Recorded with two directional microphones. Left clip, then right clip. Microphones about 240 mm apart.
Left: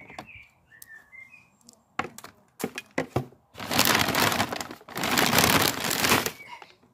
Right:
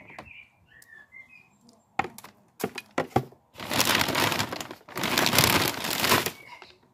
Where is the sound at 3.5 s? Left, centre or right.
Centre.